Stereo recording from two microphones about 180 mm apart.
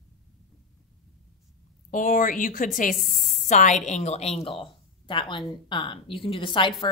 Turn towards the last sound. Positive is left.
turn(degrees=30)  # may be behind; listen again after turning